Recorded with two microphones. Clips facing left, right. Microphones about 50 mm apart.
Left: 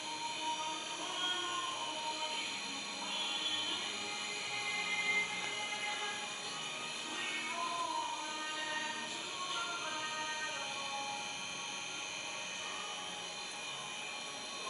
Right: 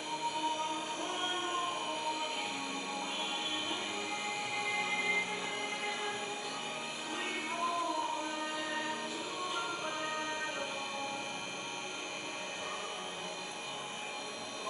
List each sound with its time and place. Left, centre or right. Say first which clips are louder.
1.0 s a sound: right 1 dB; centre
4.6 s music: right 2 dB; centre
8.5 s music: right 3 dB; centre